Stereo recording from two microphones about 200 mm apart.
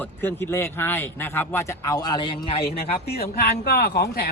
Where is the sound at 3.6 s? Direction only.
50° left (ahead or behind).